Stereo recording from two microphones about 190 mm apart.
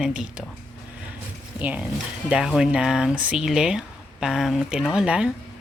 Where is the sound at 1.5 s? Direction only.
5° right (ahead or behind).